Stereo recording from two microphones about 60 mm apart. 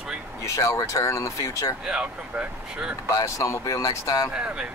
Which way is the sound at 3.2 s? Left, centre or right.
Left.